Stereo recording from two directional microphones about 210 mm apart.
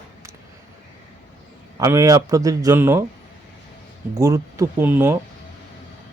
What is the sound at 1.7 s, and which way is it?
Speech, 15° right (ahead or behind).